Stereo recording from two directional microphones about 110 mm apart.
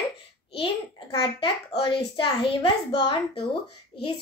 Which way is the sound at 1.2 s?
55° left (ahead or behind).